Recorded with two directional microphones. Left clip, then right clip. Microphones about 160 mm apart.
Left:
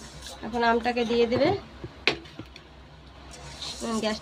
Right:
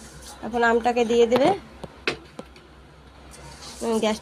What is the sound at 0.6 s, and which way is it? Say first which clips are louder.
Speech: right 4 dB; 15° right (ahead or behind).